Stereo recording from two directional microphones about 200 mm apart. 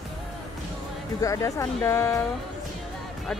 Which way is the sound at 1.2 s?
15° left (ahead or behind).